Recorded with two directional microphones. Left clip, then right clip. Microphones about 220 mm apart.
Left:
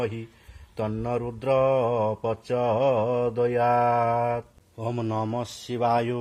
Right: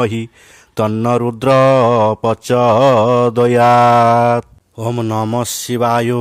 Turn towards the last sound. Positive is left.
turn(degrees=-45)  # may be behind; listen again after turning